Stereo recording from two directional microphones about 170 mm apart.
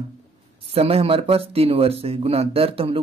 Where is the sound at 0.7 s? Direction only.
35° right (ahead or behind).